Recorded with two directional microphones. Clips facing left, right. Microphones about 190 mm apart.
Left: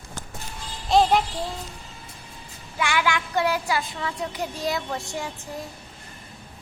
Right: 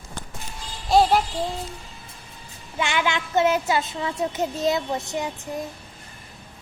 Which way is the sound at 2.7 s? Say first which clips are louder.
Even; 25° right (ahead or behind).